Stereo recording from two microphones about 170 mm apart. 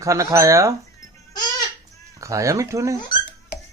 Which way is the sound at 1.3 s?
25° left (ahead or behind).